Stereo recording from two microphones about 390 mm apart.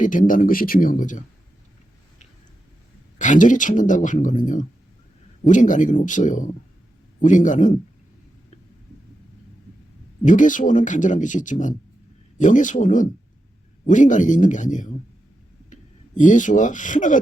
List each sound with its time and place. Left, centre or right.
0.0 s speech: centre
3.2 s speech: centre
10.2 s speech: centre